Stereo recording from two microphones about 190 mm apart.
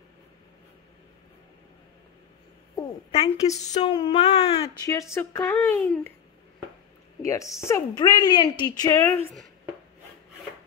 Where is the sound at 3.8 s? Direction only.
25° left (ahead or behind).